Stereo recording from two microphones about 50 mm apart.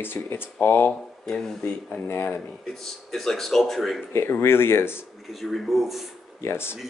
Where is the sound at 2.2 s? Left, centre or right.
Left.